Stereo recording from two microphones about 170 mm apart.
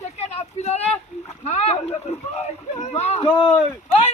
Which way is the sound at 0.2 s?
40° left (ahead or behind).